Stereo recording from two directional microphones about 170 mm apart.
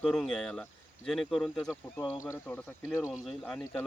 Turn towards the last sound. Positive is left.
turn(degrees=0)  # may be behind; listen again after turning